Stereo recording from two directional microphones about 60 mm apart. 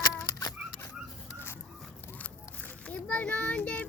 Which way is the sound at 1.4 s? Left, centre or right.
Left.